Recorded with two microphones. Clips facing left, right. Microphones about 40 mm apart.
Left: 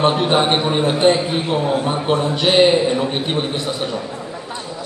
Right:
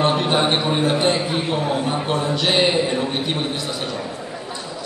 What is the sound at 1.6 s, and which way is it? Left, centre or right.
Speech, centre.